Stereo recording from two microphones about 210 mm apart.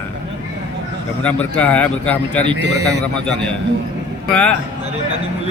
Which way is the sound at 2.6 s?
55° right (ahead or behind).